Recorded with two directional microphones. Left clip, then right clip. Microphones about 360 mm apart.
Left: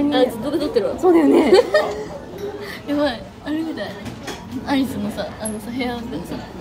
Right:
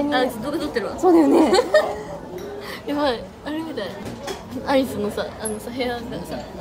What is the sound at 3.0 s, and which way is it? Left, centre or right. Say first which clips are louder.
A woman's voice: even; centre.